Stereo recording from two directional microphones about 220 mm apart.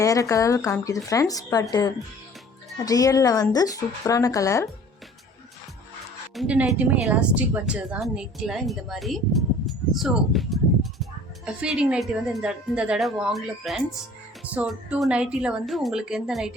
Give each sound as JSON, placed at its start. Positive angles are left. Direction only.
{"t": 0.0, "sound": "speech", "side_deg": 15}
{"t": 2.7, "sound": "speech", "side_deg": 15}
{"t": 6.3, "sound": "a woman's voice", "side_deg": -5}